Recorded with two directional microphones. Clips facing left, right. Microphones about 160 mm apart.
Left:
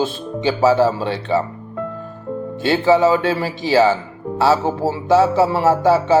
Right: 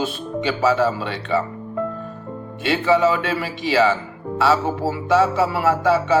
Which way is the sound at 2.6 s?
30° left (ahead or behind).